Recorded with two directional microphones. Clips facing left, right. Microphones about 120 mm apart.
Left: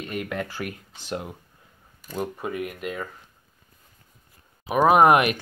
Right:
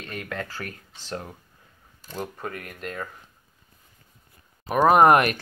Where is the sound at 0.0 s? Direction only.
15° left (ahead or behind).